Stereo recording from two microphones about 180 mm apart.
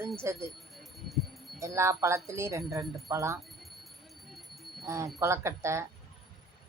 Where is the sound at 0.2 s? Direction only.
15° right (ahead or behind).